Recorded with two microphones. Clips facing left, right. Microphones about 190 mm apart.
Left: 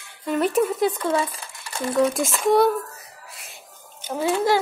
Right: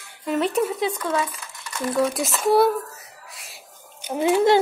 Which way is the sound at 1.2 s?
30° left (ahead or behind).